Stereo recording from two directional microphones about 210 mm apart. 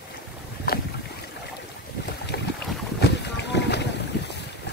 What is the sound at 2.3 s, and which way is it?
Boat, 50° left (ahead or behind).